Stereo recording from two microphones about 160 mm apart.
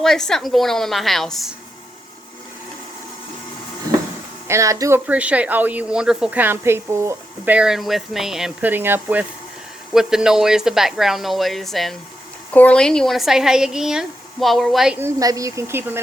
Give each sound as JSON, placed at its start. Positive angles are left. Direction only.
{"t": 0.0, "sound": "speech", "side_deg": 0}
{"t": 4.4, "sound": "speech", "side_deg": -20}
{"t": 14.9, "sound": "speech", "side_deg": -20}